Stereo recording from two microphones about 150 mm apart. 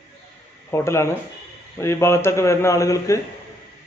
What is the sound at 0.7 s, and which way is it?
A man's voice, 15° left (ahead or behind).